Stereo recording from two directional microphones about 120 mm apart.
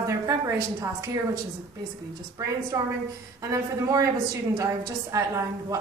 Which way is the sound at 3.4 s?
30° right (ahead or behind).